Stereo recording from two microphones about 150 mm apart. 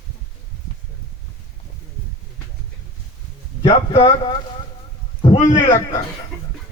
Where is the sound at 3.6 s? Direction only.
40° left (ahead or behind).